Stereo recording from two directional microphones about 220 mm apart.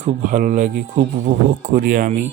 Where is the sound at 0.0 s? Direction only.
35° right (ahead or behind).